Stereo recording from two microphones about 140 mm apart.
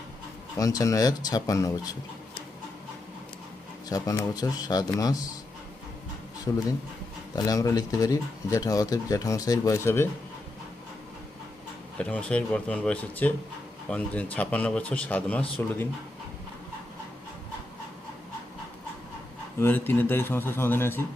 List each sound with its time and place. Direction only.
0.5 s speech: 25° left (ahead or behind)
3.8 s speech: 25° left (ahead or behind)
6.5 s speech: 25° left (ahead or behind)
11.9 s a man's voice: 10° left (ahead or behind)
19.5 s a man's voice: 15° left (ahead or behind)